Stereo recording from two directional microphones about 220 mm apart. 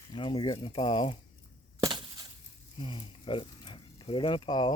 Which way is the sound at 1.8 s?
20° right (ahead or behind).